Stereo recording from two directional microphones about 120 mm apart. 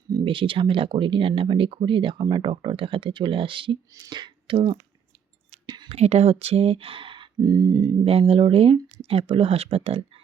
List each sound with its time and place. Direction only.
0.3 s speech: 45° right (ahead or behind)
5.6 s a sound: 40° right (ahead or behind)
5.9 s speech: 65° right (ahead or behind); by 7.9 s 35° right (ahead or behind)
8.0 s speech: 50° right (ahead or behind)